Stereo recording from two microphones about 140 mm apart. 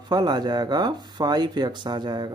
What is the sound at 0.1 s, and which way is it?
Speech, 30° right (ahead or behind).